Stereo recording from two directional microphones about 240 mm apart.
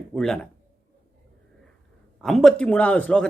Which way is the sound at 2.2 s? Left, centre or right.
Centre.